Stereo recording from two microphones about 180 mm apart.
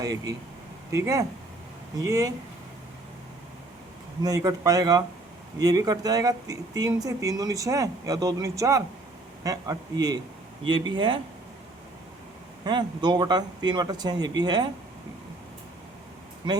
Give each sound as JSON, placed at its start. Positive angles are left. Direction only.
{"t": 0.0, "sound": "speech", "side_deg": -20}
{"t": 4.2, "sound": "speech", "side_deg": -20}
{"t": 12.6, "sound": "speech", "side_deg": -25}